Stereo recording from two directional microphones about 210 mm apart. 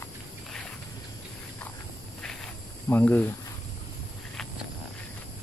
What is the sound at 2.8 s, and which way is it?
Speech, 10° left (ahead or behind).